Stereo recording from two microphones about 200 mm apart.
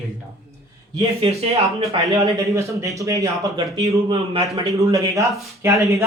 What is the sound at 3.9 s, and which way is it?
Speech, 30° right (ahead or behind).